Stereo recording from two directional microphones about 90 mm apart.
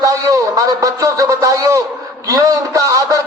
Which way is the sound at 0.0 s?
40° right (ahead or behind).